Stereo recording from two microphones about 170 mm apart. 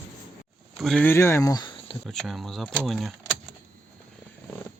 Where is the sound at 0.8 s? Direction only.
Centre (ahead or behind).